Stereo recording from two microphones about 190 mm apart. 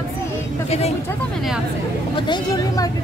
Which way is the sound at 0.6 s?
35° left (ahead or behind).